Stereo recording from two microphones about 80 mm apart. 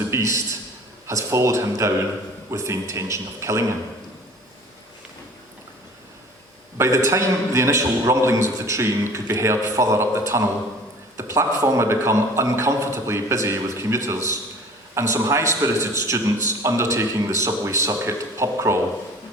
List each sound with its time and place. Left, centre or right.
0.1 s a man's voice: right
6.7 s a man's voice: right